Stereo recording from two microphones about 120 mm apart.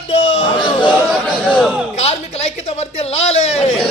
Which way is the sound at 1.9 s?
70° left (ahead or behind).